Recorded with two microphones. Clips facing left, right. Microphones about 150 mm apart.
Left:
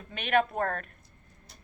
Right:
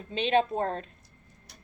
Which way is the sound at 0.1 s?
25° right (ahead or behind).